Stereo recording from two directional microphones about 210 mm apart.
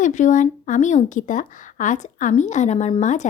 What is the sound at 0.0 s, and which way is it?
Speech, 35° left (ahead or behind).